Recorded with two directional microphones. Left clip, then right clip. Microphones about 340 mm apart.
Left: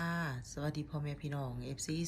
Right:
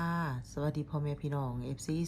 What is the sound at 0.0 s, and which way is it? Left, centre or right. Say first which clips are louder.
Speech: right 3 dB; centre.